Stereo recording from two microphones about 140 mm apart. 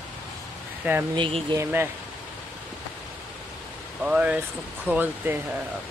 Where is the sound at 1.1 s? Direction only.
35° right (ahead or behind).